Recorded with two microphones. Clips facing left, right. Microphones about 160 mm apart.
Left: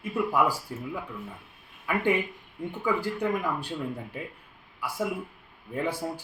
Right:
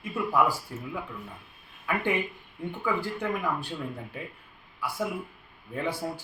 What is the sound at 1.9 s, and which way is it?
A man's voice, 10° left (ahead or behind).